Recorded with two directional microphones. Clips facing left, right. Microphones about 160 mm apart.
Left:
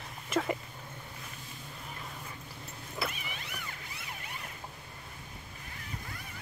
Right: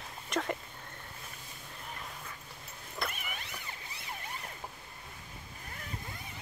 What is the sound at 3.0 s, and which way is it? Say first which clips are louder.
Vehicle: left 2 dB; 5° left (ahead or behind).